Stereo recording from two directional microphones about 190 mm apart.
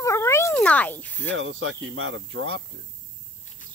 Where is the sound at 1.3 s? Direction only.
80° right.